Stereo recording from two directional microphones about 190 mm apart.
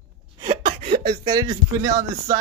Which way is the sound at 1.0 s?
25° right (ahead or behind).